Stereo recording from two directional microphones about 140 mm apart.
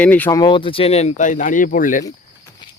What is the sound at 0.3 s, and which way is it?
Speech, 30° left (ahead or behind).